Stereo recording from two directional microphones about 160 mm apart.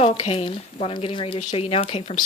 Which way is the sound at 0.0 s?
40° left (ahead or behind).